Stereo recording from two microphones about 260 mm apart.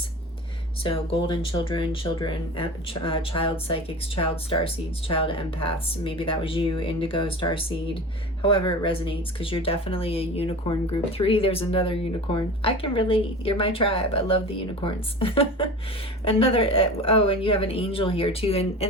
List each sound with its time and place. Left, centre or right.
0.9 s speech: centre
8.4 s speech: centre